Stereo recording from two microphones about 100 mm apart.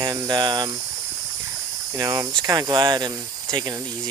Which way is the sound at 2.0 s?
40° right (ahead or behind).